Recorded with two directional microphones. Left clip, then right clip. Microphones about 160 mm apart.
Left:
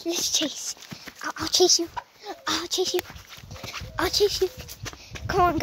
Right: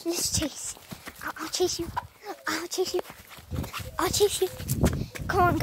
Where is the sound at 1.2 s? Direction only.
35° left (ahead or behind).